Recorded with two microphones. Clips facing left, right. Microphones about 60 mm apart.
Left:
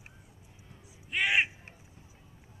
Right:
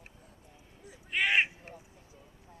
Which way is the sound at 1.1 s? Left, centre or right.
Centre.